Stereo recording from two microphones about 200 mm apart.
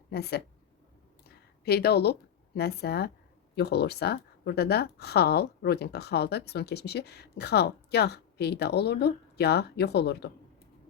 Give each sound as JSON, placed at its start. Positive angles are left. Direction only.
{"t": 0.1, "sound": "speech", "side_deg": 55}
{"t": 1.3, "sound": "a sound", "side_deg": 50}
{"t": 2.6, "sound": "speech", "side_deg": 55}